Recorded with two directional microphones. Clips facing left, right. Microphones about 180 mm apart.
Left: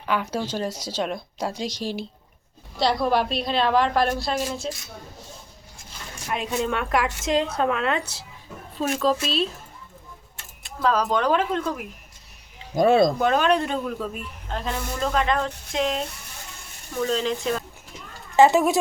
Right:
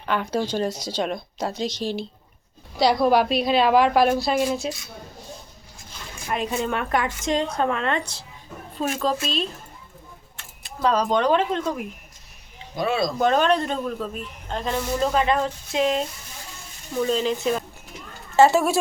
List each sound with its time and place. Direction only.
0.0 s a man's voice: 5° left (ahead or behind)
6.2 s a man's voice: centre (ahead or behind)
10.8 s a man's voice: 5° left (ahead or behind)
12.7 s speech: 45° left (ahead or behind)
13.1 s a man's voice: 5° left (ahead or behind)
17.1 s a man's voice: 5° right (ahead or behind)
18.3 s speech: 15° left (ahead or behind)